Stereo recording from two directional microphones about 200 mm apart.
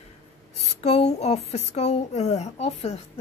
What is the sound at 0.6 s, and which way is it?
A woman's voice, 30° left (ahead or behind).